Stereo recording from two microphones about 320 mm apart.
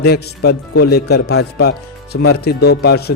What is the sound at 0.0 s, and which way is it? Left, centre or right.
A man's voice, left.